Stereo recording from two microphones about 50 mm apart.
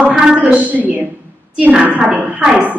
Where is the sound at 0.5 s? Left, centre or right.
Right.